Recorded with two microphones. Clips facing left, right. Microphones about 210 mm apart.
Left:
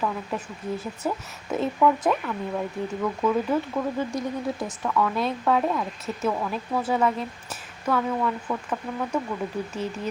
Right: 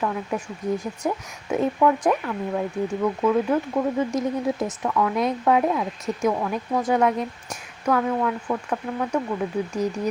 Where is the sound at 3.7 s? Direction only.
20° right (ahead or behind).